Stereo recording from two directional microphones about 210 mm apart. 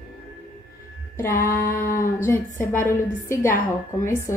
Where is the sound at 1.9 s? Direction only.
15° left (ahead or behind).